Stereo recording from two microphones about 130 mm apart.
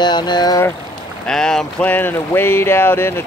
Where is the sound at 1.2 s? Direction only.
5° left (ahead or behind).